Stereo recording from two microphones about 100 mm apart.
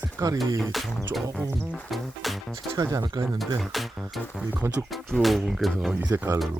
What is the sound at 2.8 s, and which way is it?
Speech, 40° right (ahead or behind).